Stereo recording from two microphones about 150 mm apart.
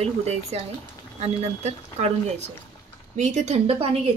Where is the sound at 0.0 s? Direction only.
45° right (ahead or behind).